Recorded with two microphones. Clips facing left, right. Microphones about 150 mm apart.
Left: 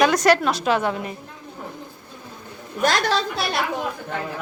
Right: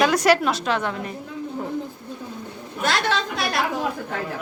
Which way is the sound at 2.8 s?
40° left (ahead or behind).